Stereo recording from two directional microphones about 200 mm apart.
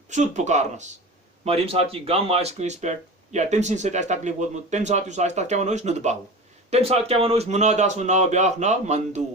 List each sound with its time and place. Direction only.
0.1 s speech: 35° right (ahead or behind)